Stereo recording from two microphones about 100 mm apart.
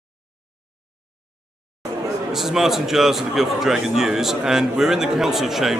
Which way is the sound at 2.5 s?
5° right (ahead or behind).